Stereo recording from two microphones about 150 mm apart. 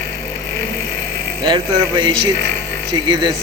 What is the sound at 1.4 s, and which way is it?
Speech, 30° right (ahead or behind).